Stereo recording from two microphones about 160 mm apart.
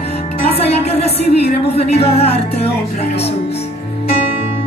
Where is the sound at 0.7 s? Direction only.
40° left (ahead or behind).